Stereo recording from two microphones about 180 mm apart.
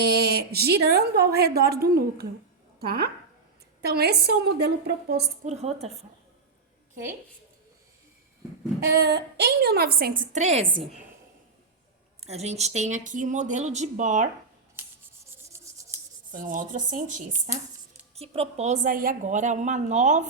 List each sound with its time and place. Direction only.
0.0 s a woman's voice: 60° right (ahead or behind)
5.5 s a woman's voice: 35° right (ahead or behind)
8.9 s a woman's voice: 65° right (ahead or behind); by 10.6 s 40° right (ahead or behind)
12.2 s a woman's voice: 35° right (ahead or behind)
16.3 s speech: 45° right (ahead or behind)
18.1 s a woman's voice: 35° right (ahead or behind)